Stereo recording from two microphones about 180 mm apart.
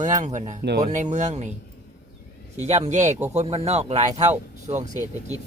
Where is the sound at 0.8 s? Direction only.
40° right (ahead or behind).